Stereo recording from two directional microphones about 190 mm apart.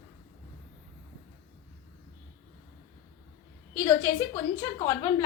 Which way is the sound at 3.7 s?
15° left (ahead or behind).